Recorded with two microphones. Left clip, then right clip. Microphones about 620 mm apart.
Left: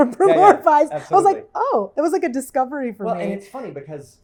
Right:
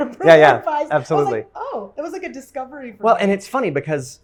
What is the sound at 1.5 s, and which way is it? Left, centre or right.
A woman's voice, left.